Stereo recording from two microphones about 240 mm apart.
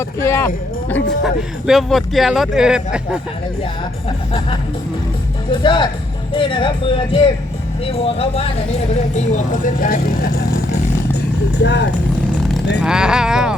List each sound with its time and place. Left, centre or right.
0.2 s speech: centre
1.2 s speech: centre
5.5 s speech: left
11.1 s vehicle: left
12.8 s speech: centre